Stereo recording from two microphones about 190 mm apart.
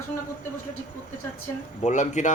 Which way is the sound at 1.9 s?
40° left (ahead or behind).